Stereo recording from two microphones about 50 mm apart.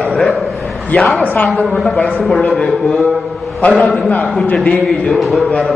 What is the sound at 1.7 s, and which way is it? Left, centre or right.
A man's voice, centre.